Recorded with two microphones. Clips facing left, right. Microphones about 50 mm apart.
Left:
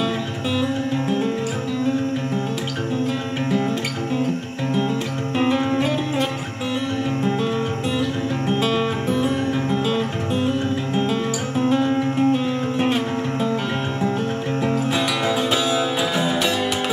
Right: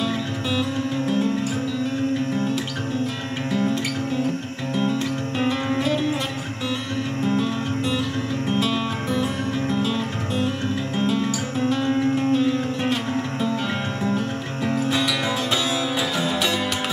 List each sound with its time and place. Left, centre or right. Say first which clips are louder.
5.4 s music: left 4 dB; centre
8.5 s music: left 3 dB; left
11.7 s music: left 1 dB; centre
14.6 s music: even; left